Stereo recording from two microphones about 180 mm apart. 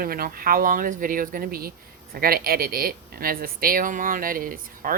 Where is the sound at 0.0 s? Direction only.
55° right (ahead or behind).